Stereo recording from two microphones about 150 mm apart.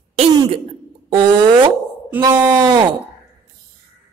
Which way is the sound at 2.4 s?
30° right (ahead or behind).